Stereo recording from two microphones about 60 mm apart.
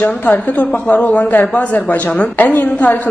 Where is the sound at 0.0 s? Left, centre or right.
Left.